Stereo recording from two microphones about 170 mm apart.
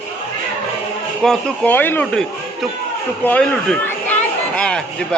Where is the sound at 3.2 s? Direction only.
5° left (ahead or behind).